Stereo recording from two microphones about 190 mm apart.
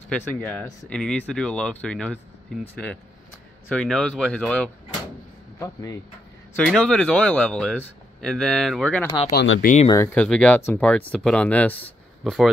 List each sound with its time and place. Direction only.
0.4 s speech: 10° left (ahead or behind)
5.6 s speech: 15° left (ahead or behind)
6.5 s speech: 5° left (ahead or behind)
9.3 s speech: 60° left (ahead or behind)
9.8 s speech: 15° left (ahead or behind); by 12.4 s centre (ahead or behind)